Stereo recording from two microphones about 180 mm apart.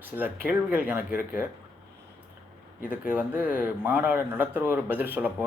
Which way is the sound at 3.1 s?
10° right (ahead or behind).